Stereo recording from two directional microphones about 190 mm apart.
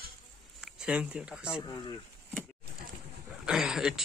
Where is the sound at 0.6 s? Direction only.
5° right (ahead or behind).